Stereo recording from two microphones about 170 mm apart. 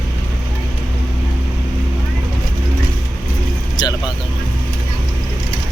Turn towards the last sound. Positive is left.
turn(degrees=25)  # may be behind; listen again after turning